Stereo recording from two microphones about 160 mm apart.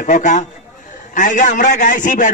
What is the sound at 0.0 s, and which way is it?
A man's voice, 55° left (ahead or behind).